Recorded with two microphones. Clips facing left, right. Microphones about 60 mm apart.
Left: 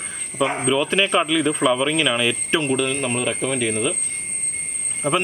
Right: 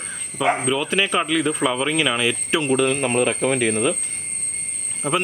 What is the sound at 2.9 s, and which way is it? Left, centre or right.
Speech, centre.